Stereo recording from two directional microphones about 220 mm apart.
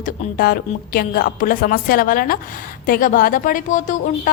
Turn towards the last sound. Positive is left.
turn(degrees=35)  # may be behind; listen again after turning